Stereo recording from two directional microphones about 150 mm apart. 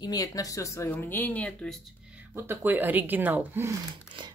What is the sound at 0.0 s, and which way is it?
Speech, 25° left (ahead or behind).